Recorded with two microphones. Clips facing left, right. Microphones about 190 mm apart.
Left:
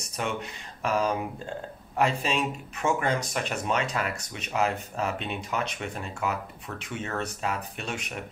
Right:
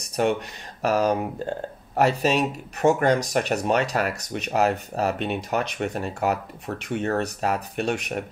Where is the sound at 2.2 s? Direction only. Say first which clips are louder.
Right 6 dB; 40° right (ahead or behind).